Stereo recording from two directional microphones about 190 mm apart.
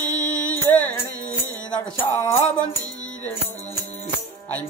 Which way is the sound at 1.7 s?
10° left (ahead or behind).